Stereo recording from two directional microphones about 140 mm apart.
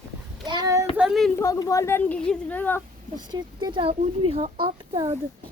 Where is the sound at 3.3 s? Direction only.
30° right (ahead or behind).